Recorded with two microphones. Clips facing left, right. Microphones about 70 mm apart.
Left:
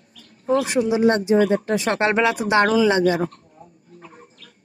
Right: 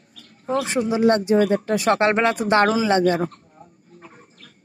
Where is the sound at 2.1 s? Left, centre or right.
Right.